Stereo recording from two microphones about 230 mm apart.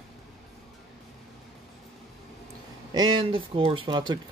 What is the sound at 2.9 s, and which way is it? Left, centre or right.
Speech, centre.